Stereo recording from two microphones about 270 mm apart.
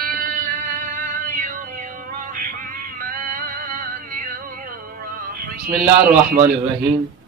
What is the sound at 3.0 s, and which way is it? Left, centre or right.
Music, right.